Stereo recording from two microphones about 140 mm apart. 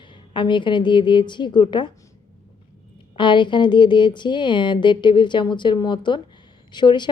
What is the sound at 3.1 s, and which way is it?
Speech, 35° left (ahead or behind).